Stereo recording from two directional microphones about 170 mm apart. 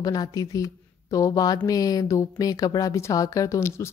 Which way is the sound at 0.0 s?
20° left (ahead or behind).